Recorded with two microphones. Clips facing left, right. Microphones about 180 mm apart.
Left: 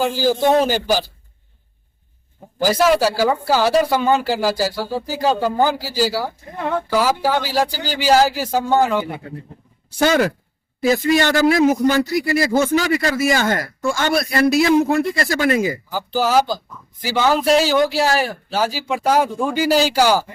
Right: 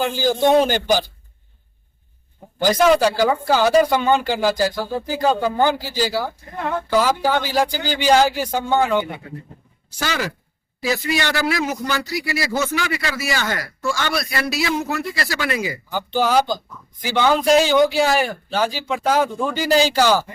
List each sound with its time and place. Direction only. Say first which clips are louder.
0.0 s speech: left 1 dB; 5° left (ahead or behind)
2.6 s a man's voice: even; 5° left (ahead or behind)
10.0 s a man's voice: left 9 dB; 55° left (ahead or behind)
15.9 s a man's voice: right 3 dB; 5° left (ahead or behind)